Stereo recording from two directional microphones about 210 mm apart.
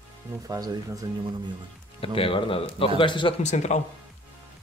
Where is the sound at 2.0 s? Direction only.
25° left (ahead or behind).